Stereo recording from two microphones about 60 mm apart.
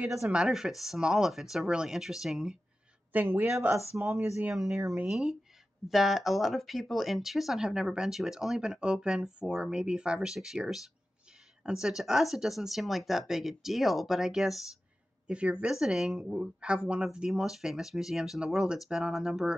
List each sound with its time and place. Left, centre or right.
0.5 s speech: centre
3.1 s speech: right
4.0 s speech: right
4.5 s speech: centre
15.2 s speech: centre